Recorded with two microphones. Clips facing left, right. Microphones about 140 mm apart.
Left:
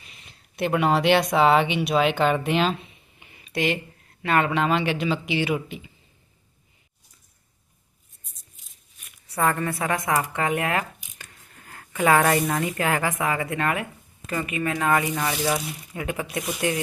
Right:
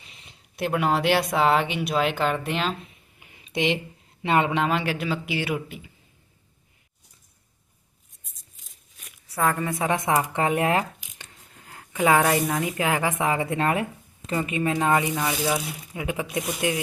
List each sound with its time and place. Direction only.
0.5 s speech: centre (ahead or behind)
3.3 s a sound: 20° right (ahead or behind)
4.2 s speech: 20° right (ahead or behind)
4.6 s speech: 5° right (ahead or behind)
9.2 s a woman's voice: centre (ahead or behind)
9.6 s speech: 20° right (ahead or behind)
15.2 s speech: 5° right (ahead or behind)